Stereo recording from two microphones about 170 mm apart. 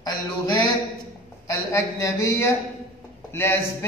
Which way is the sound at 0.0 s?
25° left (ahead or behind).